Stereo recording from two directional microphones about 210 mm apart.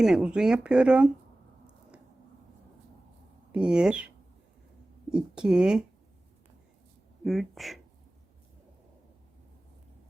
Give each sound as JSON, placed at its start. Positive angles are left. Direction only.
{"t": 0.0, "sound": "speech", "side_deg": -5}
{"t": 3.5, "sound": "speech", "side_deg": -5}
{"t": 5.1, "sound": "speech", "side_deg": -5}
{"t": 7.3, "sound": "speech", "side_deg": 0}